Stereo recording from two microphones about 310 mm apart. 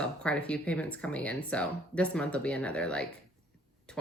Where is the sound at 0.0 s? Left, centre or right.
Centre.